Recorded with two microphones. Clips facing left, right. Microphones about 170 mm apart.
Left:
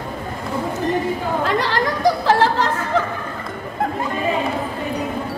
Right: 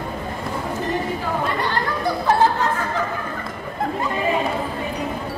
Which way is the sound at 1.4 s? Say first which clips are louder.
Left 3 dB; 90° left.